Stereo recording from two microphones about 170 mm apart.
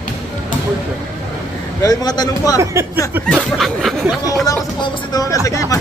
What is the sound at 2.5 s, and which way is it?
Speech, 15° right (ahead or behind).